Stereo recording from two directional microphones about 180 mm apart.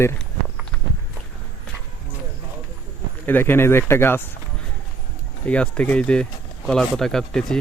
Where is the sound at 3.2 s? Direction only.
10° left (ahead or behind).